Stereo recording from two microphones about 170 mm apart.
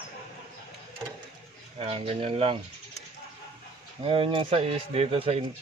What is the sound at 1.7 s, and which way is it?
Speech, 35° right (ahead or behind).